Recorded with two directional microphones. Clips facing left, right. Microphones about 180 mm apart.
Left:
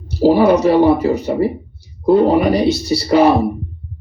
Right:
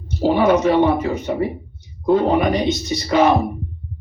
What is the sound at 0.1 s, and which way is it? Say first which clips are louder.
Speech: left 4 dB; 35° left (ahead or behind).